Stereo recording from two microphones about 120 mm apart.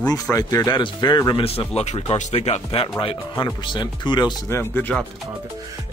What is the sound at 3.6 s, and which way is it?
Speech, 40° left (ahead or behind).